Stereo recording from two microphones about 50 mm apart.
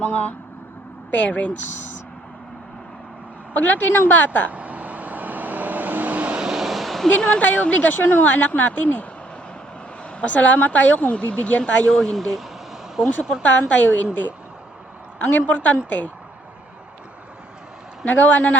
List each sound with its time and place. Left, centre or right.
0.0 s speech: left
3.5 s speech: left
4.5 s vehicle: right
6.4 s vehicle: centre
7.2 s speech: centre
7.4 s speech: left
11.9 s speech: centre
13.4 s speech: left
18.0 s speech: left